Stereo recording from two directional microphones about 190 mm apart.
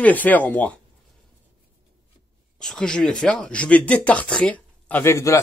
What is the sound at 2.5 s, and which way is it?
Speech, 5° left (ahead or behind).